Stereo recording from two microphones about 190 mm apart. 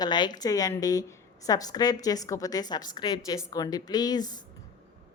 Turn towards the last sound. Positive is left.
turn(degrees=20)  # may be behind; listen again after turning